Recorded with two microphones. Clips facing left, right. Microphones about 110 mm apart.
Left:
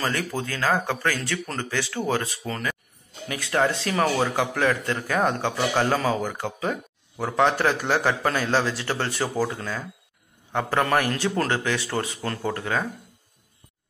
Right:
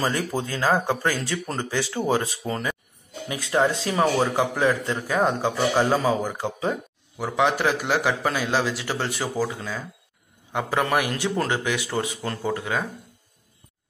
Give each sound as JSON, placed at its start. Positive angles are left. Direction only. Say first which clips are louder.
{"t": 0.0, "sound": "speech", "louder": "right 2 dB", "side_deg": -15}